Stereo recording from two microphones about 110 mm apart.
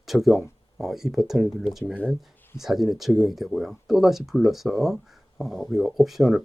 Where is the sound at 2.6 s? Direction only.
5° right (ahead or behind).